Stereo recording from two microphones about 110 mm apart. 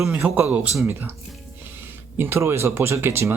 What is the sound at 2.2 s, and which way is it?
Speech, 25° right (ahead or behind).